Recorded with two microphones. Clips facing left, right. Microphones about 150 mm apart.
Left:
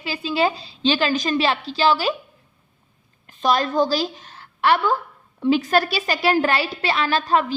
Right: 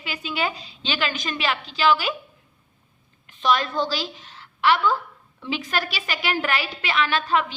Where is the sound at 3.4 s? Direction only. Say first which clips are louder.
Left 3 dB; 40° left (ahead or behind).